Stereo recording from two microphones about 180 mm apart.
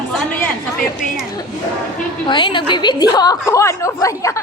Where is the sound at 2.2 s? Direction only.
25° left (ahead or behind).